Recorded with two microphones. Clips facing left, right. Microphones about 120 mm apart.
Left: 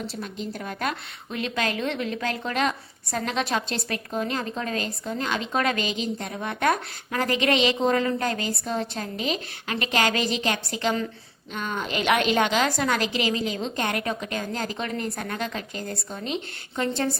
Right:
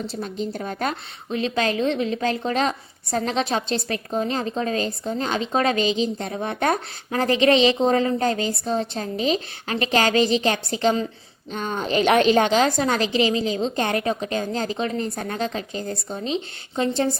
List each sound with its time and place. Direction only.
0.2 s a woman's voice: 35° right (ahead or behind)